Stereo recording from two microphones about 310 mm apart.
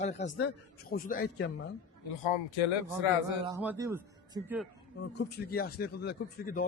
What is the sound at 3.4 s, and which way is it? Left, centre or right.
Speech, centre.